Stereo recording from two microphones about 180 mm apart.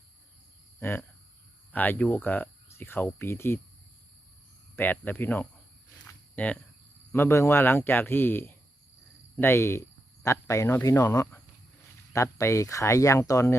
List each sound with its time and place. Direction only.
0.8 s speech: 15° left (ahead or behind)
4.8 s speech: 10° left (ahead or behind)
6.1 s a sound: 10° left (ahead or behind)
7.1 s speech: 15° left (ahead or behind)